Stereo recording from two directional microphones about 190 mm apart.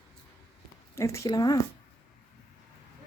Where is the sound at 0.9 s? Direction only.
15° left (ahead or behind).